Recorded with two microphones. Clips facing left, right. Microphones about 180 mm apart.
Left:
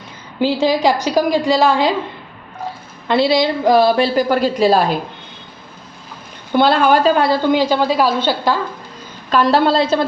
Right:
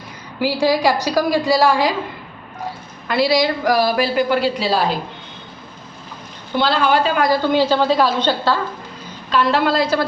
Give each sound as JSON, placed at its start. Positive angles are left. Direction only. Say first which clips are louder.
{"t": 0.3, "sound": "a woman's voice", "louder": "left 2 dB", "side_deg": 20}
{"t": 3.1, "sound": "a woman's voice", "louder": "left 2 dB", "side_deg": 25}
{"t": 6.6, "sound": "a woman's voice", "louder": "left 4 dB", "side_deg": 50}
{"t": 7.4, "sound": "a woman's voice", "louder": "left 1 dB", "side_deg": 15}
{"t": 9.3, "sound": "a woman's voice", "louder": "left 3 dB", "side_deg": 40}